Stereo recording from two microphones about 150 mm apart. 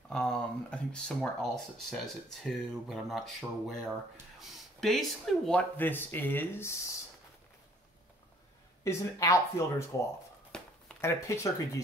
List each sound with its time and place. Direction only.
0.1 s speech: 5° left (ahead or behind)
8.8 s speech: 20° left (ahead or behind)
10.5 s a sound: 5° left (ahead or behind)
11.0 s speech: 20° left (ahead or behind)